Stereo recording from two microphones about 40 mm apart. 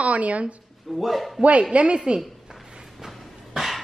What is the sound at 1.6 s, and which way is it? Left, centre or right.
Speech, right.